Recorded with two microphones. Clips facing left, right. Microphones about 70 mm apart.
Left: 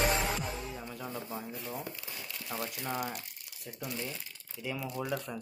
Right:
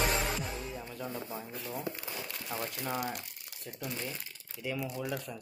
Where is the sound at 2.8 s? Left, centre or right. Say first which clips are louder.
Right 1 dB; centre.